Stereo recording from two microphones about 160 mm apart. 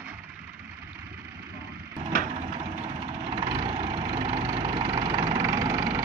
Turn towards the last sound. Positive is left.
turn(degrees=-25)  # may be behind; listen again after turning